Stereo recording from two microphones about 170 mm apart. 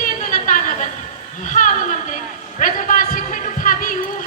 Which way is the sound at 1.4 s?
50° left (ahead or behind).